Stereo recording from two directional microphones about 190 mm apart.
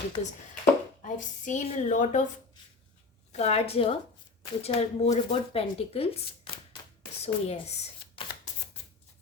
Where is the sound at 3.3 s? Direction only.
35° left (ahead or behind).